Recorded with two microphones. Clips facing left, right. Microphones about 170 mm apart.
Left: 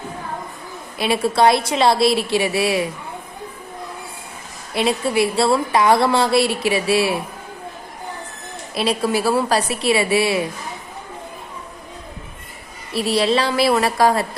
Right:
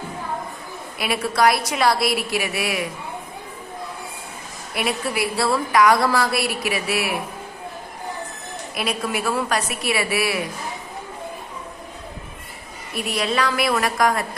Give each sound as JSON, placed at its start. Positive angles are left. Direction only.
{"t": 0.9, "sound": "a woman's voice", "side_deg": 25}
{"t": 4.7, "sound": "a woman's voice", "side_deg": 25}
{"t": 8.7, "sound": "a woman's voice", "side_deg": 30}
{"t": 12.9, "sound": "a woman's voice", "side_deg": 30}